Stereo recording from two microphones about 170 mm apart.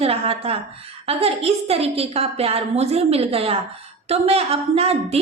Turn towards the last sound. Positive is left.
turn(degrees=-35)  # may be behind; listen again after turning